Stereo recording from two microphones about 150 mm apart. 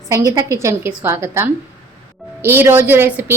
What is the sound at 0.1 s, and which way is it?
Speech, 20° right (ahead or behind).